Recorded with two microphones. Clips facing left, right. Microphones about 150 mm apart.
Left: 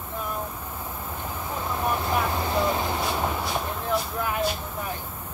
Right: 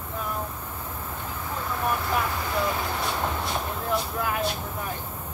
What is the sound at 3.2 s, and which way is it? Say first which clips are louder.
Speech: left 1 dB; centre (ahead or behind).